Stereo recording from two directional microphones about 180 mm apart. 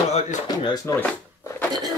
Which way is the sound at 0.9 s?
15° left (ahead or behind).